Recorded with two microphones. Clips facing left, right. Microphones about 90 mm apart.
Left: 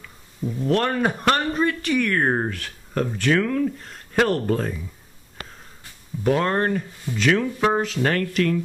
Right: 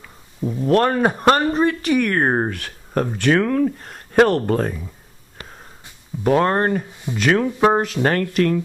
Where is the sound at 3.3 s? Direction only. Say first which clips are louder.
Right 3 dB; 40° right (ahead or behind).